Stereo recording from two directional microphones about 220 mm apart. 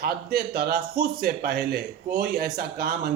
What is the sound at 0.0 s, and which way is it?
Speech, 45° right (ahead or behind).